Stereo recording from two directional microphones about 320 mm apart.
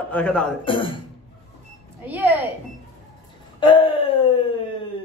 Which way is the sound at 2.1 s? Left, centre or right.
Centre.